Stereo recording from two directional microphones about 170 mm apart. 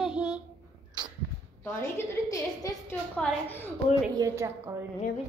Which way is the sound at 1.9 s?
20° left (ahead or behind).